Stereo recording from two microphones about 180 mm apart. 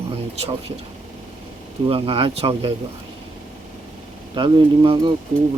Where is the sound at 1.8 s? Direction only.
30° right (ahead or behind).